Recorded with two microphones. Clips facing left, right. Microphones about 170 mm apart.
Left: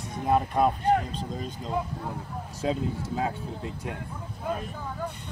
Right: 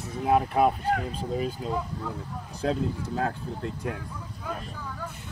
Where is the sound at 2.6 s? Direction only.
5° left (ahead or behind).